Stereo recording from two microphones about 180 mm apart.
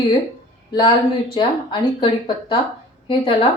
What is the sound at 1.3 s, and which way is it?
Speech, 25° left (ahead or behind).